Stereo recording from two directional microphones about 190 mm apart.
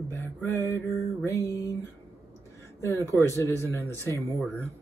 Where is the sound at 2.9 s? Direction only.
15° right (ahead or behind).